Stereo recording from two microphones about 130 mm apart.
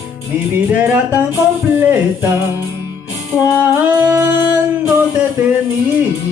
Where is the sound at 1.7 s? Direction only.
15° right (ahead or behind).